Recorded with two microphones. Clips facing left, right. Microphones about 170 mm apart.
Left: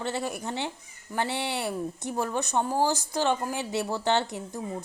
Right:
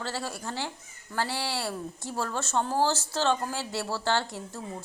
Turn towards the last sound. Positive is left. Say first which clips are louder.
# left 3 dB
turn(degrees=20)  # may be behind; listen again after turning